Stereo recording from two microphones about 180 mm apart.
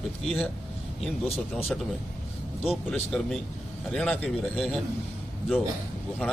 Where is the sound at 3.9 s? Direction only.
5° left (ahead or behind).